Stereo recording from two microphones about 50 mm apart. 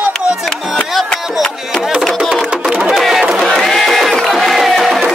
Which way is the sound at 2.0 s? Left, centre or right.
Centre.